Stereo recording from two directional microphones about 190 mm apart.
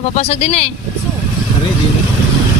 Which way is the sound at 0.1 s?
35° left (ahead or behind).